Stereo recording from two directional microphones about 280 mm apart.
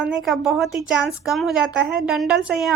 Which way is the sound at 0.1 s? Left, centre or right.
Centre.